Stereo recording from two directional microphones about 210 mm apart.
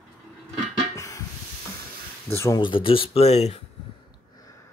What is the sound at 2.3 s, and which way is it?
Speech, 15° left (ahead or behind).